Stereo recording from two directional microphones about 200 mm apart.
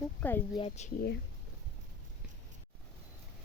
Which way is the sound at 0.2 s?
10° left (ahead or behind).